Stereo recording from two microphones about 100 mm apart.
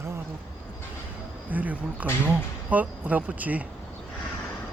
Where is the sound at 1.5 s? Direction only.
15° right (ahead or behind).